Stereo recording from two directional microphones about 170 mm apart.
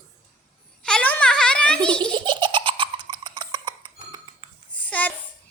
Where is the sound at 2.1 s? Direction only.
25° right (ahead or behind).